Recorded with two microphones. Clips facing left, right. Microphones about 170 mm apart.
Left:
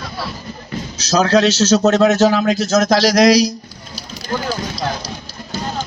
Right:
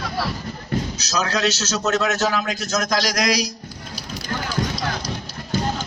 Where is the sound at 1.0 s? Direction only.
30° left (ahead or behind).